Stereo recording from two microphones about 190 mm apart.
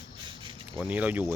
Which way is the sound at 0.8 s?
10° right (ahead or behind).